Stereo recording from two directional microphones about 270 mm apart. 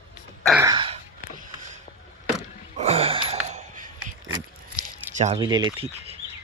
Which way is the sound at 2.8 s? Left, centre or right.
Right.